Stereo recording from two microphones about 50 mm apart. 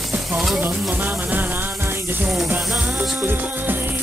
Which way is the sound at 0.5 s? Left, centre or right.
Right.